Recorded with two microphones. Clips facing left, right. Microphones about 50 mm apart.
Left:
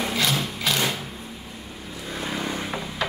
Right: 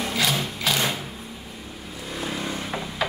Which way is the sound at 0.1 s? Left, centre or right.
Centre.